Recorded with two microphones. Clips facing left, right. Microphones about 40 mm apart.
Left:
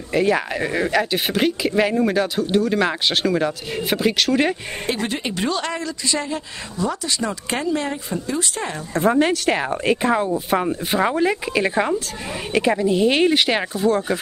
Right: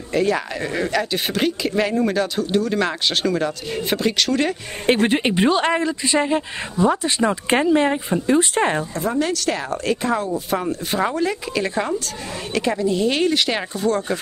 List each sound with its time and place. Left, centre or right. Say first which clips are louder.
0.1 s speech: left 1 dB; centre
4.8 s a woman's voice: right 7 dB; right
8.9 s speech: left 4 dB; left; by 14.2 s centre